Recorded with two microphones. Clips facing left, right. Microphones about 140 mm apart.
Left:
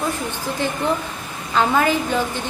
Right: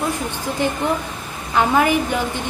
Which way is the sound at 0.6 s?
15° right (ahead or behind).